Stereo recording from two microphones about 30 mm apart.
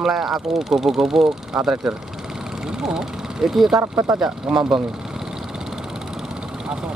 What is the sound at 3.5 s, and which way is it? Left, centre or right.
Speech, centre.